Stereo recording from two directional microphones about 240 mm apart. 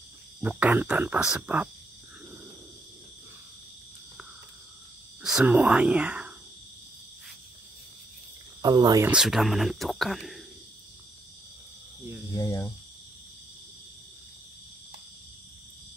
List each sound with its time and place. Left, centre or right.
0.4 s speech: centre
5.2 s speech: centre
8.6 s speech: centre
9.1 s speech: centre
12.4 s speech: centre